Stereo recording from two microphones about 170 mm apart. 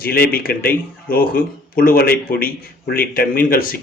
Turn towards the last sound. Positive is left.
turn(degrees=60)  # may be behind; listen again after turning